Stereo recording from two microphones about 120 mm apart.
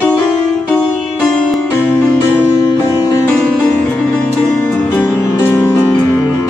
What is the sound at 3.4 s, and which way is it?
Music, 10° left (ahead or behind).